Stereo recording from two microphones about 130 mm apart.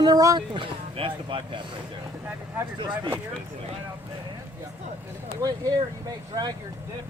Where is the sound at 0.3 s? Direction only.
40° right (ahead or behind).